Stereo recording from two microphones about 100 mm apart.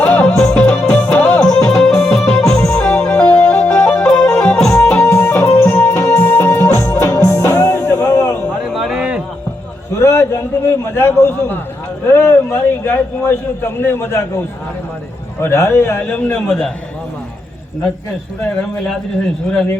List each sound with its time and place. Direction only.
0.0 s music: 10° left (ahead or behind)
1.4 s music: 5° left (ahead or behind)
4.9 s music: 25° left (ahead or behind)
8.7 s a sound: 5° right (ahead or behind)
10.0 s a sound: 30° left (ahead or behind)
15.4 s a man's voice: 25° left (ahead or behind); by 16.7 s 10° left (ahead or behind)